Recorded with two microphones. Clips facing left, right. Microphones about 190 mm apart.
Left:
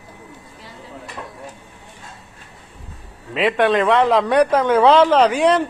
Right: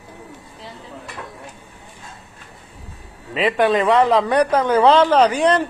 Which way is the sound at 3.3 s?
Centre (ahead or behind).